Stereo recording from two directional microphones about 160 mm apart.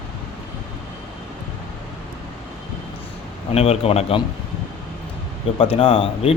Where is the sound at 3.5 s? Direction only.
40° left (ahead or behind).